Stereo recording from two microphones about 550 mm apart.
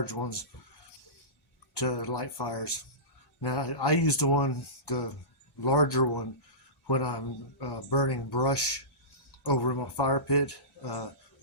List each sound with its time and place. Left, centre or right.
0.0 s speech: left
1.7 s speech: left